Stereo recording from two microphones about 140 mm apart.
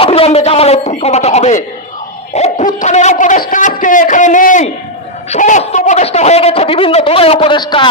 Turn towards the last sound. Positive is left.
turn(degrees=35)  # may be behind; listen again after turning